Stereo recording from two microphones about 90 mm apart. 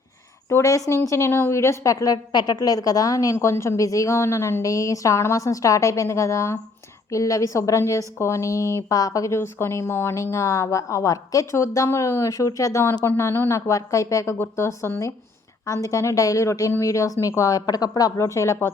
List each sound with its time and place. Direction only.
0.4 s a woman's voice: 35° left (ahead or behind)
13.1 s a woman's voice: 25° left (ahead or behind)